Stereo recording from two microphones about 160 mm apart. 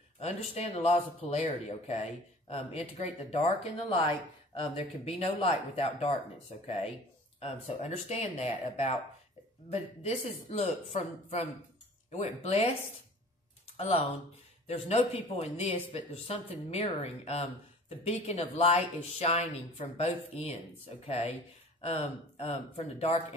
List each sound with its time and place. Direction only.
0.2 s a woman's voice: 40° left (ahead or behind)
14.9 s a woman's voice: 40° left (ahead or behind)
21.8 s speech: 40° left (ahead or behind)